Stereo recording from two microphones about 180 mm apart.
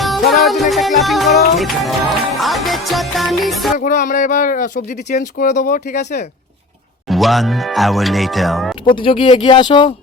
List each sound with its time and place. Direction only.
0.0 s music: centre (ahead or behind)
3.8 s speech: 45° left (ahead or behind)
7.1 s music: centre (ahead or behind)
8.9 s speech: 25° left (ahead or behind)